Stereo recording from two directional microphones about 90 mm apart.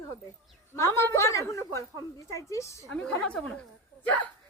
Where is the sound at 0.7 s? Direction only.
30° left (ahead or behind).